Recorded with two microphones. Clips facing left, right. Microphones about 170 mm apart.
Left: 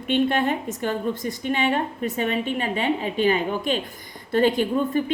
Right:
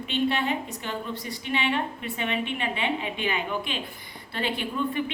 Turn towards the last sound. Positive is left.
turn(degrees=40)  # may be behind; listen again after turning